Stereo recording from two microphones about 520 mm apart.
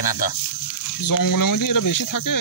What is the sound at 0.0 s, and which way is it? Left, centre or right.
Speech, left.